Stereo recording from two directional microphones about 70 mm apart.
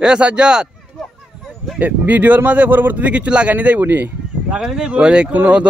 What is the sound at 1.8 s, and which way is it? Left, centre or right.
Speech, right.